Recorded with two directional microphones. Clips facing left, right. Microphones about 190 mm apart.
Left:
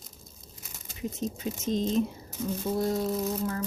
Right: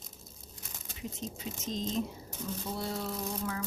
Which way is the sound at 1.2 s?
55° left (ahead or behind).